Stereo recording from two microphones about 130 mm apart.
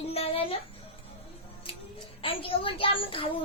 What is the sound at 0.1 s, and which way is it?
Music, 50° left (ahead or behind).